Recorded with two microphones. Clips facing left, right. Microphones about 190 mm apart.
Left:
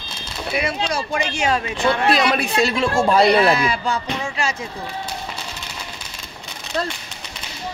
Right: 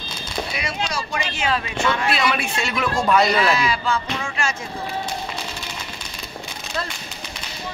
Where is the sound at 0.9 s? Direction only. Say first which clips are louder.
Left 4 dB; 55° left (ahead or behind); by 3.6 s 35° left (ahead or behind).